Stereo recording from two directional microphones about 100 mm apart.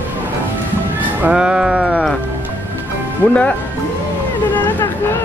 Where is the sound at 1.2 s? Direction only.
5° right (ahead or behind).